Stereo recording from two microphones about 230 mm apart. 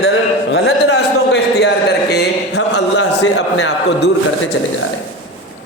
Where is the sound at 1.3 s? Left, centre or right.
Left.